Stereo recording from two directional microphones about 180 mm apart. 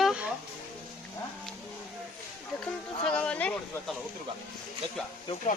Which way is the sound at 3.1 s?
5° left (ahead or behind).